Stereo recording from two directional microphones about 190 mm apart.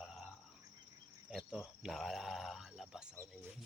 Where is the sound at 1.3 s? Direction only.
Centre (ahead or behind).